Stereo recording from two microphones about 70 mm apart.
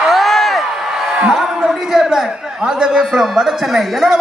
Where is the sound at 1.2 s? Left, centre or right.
Centre.